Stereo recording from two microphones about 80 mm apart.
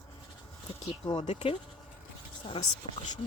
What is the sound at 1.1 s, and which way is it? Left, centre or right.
Speech, left.